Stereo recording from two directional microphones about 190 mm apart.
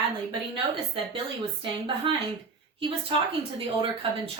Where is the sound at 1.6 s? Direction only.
25° right (ahead or behind).